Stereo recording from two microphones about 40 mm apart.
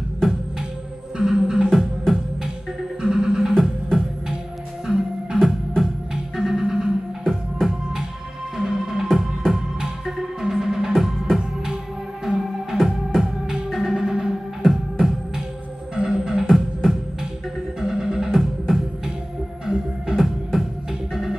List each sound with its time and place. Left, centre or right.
1.1 s music: centre
14.6 s music: centre
16.0 s music: centre
16.4 s music: centre